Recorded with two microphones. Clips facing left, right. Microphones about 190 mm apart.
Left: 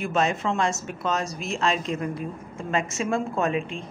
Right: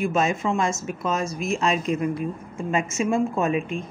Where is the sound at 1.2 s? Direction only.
35° left (ahead or behind).